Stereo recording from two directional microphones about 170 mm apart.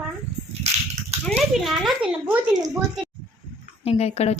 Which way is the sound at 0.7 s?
40° right (ahead or behind).